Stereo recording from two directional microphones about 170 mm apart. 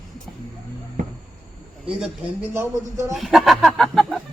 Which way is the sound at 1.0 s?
45° right (ahead or behind).